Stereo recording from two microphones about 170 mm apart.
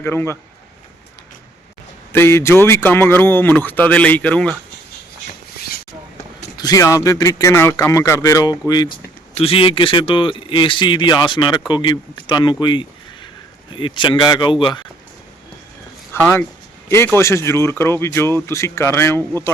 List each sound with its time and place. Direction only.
0.0 s speech: 15° left (ahead or behind)
2.1 s speech: 15° left (ahead or behind)
5.5 s a sound: 65° left (ahead or behind)
6.6 s speech: 20° left (ahead or behind)
9.3 s speech: 35° left (ahead or behind)
16.1 s speech: 10° left (ahead or behind)